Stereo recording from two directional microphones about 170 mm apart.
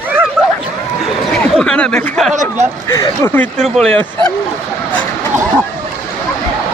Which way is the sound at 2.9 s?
15° left (ahead or behind).